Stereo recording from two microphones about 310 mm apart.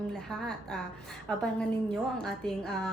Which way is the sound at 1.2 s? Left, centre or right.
Centre.